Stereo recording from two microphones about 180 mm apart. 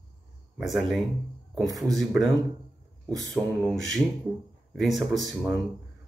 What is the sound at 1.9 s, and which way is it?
Speech, 20° right (ahead or behind).